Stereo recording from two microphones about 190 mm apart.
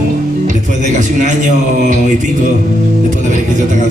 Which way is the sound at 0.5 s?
40° right (ahead or behind).